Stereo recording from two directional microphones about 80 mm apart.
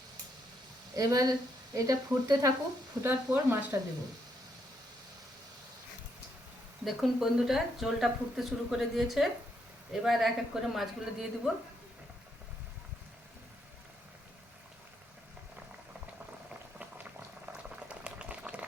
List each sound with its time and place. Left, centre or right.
0.9 s speech: right
3.0 s speech: right
6.8 s speech: centre
16.8 s boiling: centre